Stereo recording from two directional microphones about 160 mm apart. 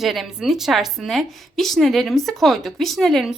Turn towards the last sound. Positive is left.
turn(degrees=0)  # may be behind; listen again after turning